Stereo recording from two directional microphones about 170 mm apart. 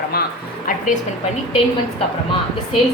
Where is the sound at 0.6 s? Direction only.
50° left (ahead or behind).